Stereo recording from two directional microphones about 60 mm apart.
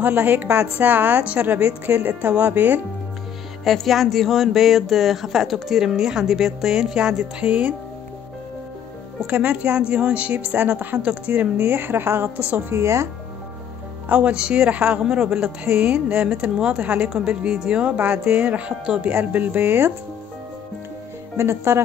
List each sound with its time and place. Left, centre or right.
0.0 s speech: right
3.6 s speech: centre
7.4 s speech: right
9.3 s a woman's voice: centre
12.7 s speech: right
14.0 s a woman's voice: right
21.4 s speech: right